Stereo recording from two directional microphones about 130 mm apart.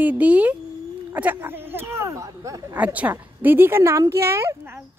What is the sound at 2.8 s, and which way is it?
A woman's voice, 10° right (ahead or behind).